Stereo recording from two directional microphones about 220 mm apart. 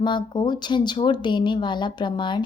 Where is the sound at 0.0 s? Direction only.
20° left (ahead or behind).